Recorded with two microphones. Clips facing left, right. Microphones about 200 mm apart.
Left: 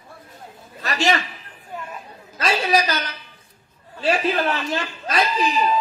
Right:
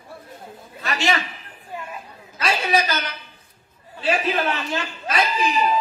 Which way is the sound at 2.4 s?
40° left (ahead or behind).